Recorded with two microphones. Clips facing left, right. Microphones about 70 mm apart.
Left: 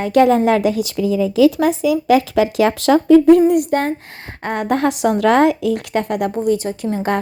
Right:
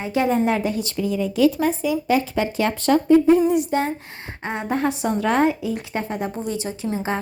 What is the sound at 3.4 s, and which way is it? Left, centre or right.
Speech, left.